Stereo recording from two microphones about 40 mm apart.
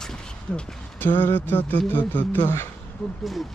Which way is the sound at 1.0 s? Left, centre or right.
Left.